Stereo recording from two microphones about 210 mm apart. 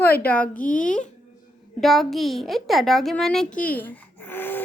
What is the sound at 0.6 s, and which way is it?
Speech, 40° left (ahead or behind).